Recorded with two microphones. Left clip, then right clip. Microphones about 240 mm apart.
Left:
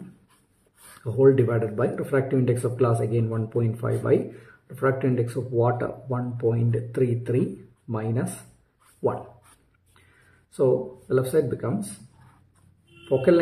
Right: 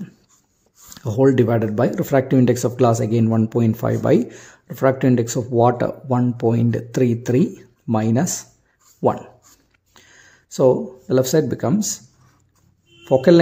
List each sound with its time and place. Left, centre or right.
1.0 s speech: right
10.5 s speech: right